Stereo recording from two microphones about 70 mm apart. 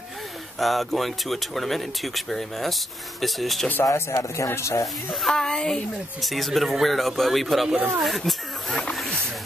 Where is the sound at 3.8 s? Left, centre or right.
Left.